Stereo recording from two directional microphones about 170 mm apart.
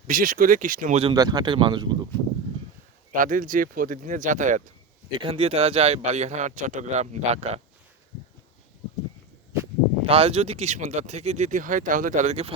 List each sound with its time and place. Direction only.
0.1 s speech: 55° right (ahead or behind)
1.0 s speech: 25° right (ahead or behind)
3.1 s speech: 50° right (ahead or behind)
5.1 s speech: 30° right (ahead or behind)
10.1 s speech: 35° right (ahead or behind)